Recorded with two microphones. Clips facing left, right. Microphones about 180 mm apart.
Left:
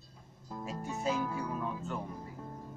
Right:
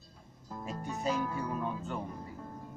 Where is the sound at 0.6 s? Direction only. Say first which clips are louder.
Even; 5° left (ahead or behind).